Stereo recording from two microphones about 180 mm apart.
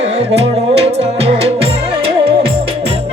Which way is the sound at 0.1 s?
35° right (ahead or behind).